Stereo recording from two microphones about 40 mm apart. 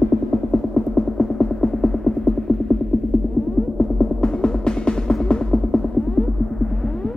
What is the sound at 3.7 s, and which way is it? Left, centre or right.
Music, left.